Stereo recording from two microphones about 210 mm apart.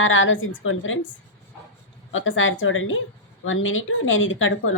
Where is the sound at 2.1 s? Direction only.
65° left (ahead or behind).